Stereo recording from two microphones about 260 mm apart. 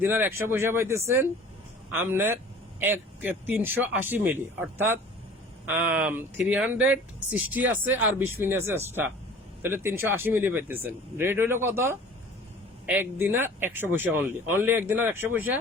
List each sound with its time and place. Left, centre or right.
0.0 s speech: centre